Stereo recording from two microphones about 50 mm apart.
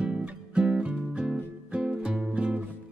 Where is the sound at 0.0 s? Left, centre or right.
Right.